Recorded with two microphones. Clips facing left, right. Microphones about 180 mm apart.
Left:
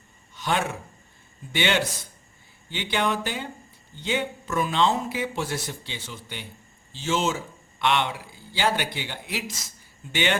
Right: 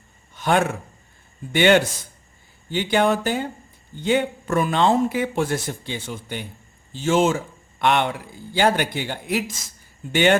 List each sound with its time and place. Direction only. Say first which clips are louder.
0.3 s speech: right 6 dB; 50° right (ahead or behind)